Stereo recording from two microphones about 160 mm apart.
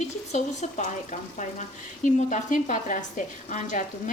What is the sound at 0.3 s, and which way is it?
Speech, 45° left (ahead or behind).